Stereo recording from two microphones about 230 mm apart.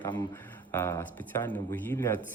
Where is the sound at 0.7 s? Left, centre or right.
Centre.